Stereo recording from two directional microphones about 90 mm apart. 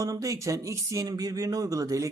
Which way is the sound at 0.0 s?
40° right (ahead or behind).